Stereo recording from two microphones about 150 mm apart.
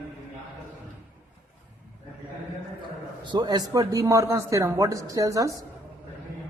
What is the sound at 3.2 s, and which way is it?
A man's voice, 30° right (ahead or behind).